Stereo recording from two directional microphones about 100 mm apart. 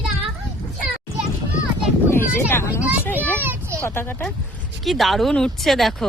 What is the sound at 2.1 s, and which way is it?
Speech, 25° left (ahead or behind).